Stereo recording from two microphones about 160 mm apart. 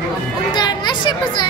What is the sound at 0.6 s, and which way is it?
Speech, 30° left (ahead or behind).